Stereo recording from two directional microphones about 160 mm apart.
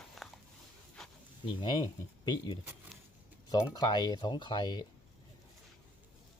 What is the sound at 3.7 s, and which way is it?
Speech, 25° left (ahead or behind).